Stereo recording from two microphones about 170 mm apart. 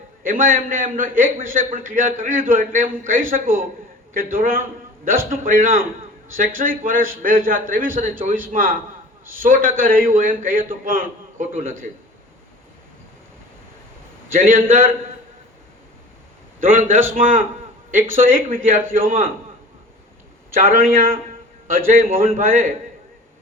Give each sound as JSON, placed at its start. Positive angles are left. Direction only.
{"t": 0.2, "sound": "a man's voice", "side_deg": -55}
{"t": 14.3, "sound": "a man's voice", "side_deg": -55}
{"t": 16.6, "sound": "a man's voice", "side_deg": -55}
{"t": 20.5, "sound": "a man's voice", "side_deg": -55}